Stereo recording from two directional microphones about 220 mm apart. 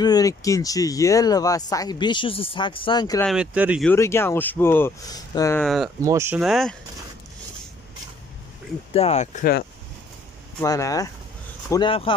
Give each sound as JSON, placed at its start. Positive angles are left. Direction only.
{"t": 0.0, "sound": "speech", "side_deg": 15}
{"t": 3.2, "sound": "speech", "side_deg": 0}
{"t": 3.8, "sound": "speech", "side_deg": 10}
{"t": 5.6, "sound": "speech", "side_deg": 0}
{"t": 6.0, "sound": "speech", "side_deg": -10}
{"t": 8.9, "sound": "speech", "side_deg": 30}
{"t": 10.6, "sound": "speech", "side_deg": 15}